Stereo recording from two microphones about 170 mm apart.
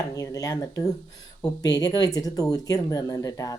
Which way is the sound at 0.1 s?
20° left (ahead or behind).